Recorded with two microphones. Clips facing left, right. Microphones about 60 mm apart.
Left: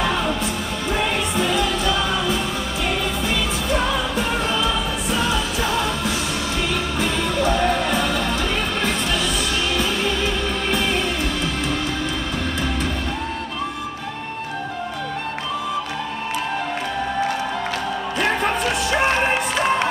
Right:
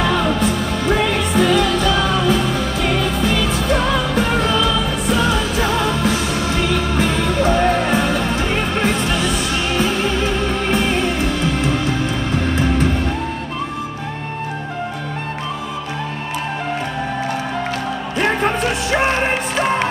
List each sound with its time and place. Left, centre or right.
0.8 s music: right